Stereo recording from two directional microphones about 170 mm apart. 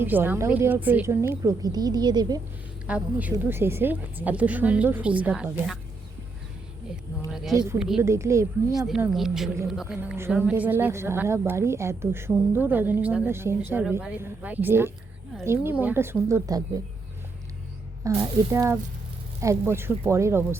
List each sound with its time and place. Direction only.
0.0 s a woman's voice: 10° right (ahead or behind)
2.8 s a woman's voice: 10° right (ahead or behind)
7.3 s a sound: centre (ahead or behind)
7.8 s a woman's voice: 5° right (ahead or behind)
8.0 s a woman's voice: 15° right (ahead or behind)
9.0 s a woman's voice: 5° right (ahead or behind); by 16.6 s 20° right (ahead or behind)
18.0 s a woman's voice: 15° right (ahead or behind)